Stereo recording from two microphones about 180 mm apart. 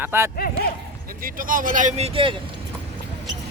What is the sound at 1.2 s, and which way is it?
Speech, 50° right (ahead or behind).